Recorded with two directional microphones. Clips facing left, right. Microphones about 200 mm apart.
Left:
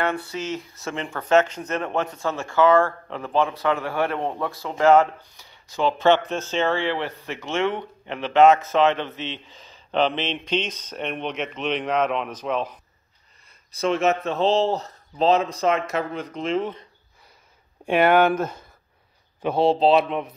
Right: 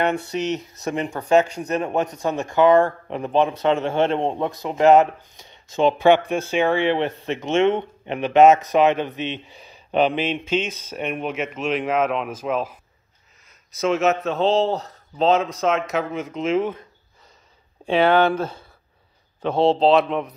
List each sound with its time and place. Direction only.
0.0 s speech: 20° right (ahead or behind)
13.7 s a man's voice: centre (ahead or behind)
17.8 s speech: 10° left (ahead or behind)
19.4 s a man's voice: centre (ahead or behind)